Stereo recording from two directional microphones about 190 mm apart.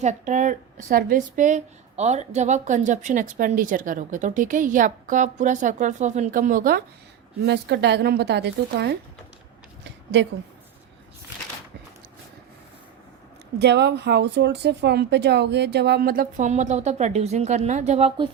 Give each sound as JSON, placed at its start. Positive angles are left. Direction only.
{"t": 0.0, "sound": "a woman's voice", "side_deg": -40}
{"t": 7.4, "sound": "speech", "side_deg": -60}
{"t": 9.8, "sound": "a sound", "side_deg": -70}
{"t": 13.6, "sound": "speech", "side_deg": -60}